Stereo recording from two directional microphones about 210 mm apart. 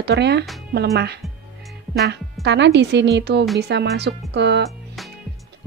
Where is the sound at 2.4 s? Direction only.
55° right (ahead or behind).